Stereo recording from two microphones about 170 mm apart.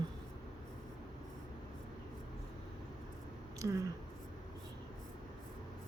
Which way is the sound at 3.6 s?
15° right (ahead or behind).